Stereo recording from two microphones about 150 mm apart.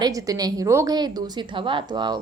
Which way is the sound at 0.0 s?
25° right (ahead or behind).